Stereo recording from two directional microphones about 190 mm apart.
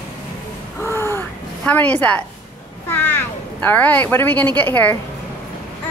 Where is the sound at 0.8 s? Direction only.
15° left (ahead or behind).